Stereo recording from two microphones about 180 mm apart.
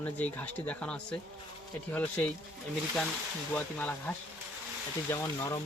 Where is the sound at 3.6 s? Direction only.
10° left (ahead or behind).